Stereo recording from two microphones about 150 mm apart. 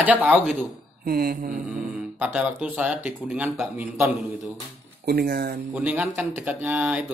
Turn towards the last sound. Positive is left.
turn(degrees=-10)  # may be behind; listen again after turning